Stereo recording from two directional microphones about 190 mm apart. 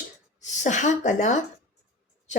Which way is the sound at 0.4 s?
40° left (ahead or behind).